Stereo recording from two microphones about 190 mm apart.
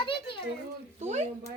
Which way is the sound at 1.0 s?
35° right (ahead or behind).